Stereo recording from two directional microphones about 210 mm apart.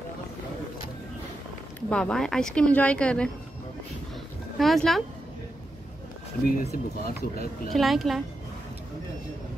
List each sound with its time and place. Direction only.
1.9 s speech: 5° left (ahead or behind)
4.6 s speech: centre (ahead or behind)
6.4 s speech: 45° left (ahead or behind)
7.7 s speech: centre (ahead or behind)